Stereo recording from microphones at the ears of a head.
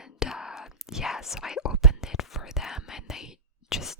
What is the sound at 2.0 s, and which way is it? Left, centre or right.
Whispering, left.